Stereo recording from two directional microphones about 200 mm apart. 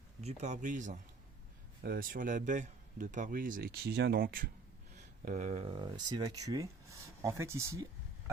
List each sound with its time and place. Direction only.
0.2 s a man's voice: 35° right (ahead or behind)
5.2 s speech: 35° right (ahead or behind); by 7.9 s 15° right (ahead or behind)